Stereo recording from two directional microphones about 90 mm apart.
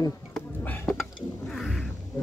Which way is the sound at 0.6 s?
20° left (ahead or behind).